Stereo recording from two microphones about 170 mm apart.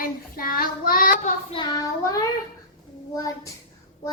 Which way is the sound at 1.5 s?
25° left (ahead or behind).